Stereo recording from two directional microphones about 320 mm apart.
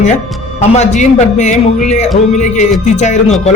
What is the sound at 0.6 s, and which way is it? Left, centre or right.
A man's voice, left.